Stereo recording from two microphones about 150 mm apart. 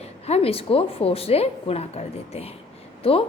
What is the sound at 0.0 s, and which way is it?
A woman's voice, 40° left (ahead or behind).